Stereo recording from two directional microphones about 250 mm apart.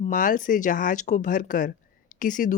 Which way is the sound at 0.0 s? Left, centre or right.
Left.